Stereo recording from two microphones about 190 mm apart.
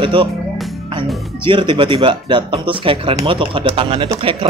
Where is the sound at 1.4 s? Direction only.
25° right (ahead or behind).